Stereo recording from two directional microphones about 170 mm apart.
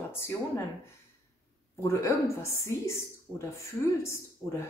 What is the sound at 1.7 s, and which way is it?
Speech, 15° left (ahead or behind).